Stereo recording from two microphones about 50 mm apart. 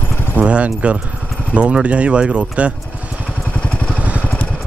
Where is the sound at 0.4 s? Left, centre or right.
Right.